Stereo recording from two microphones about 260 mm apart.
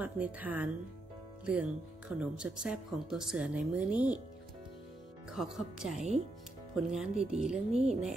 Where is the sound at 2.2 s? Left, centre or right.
Centre.